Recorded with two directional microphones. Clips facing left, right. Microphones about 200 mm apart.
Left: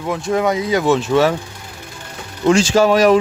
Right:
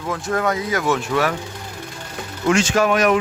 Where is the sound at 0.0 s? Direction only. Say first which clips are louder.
Left 4 dB; 20° left (ahead or behind).